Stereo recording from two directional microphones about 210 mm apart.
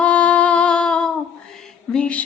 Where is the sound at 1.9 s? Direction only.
5° left (ahead or behind).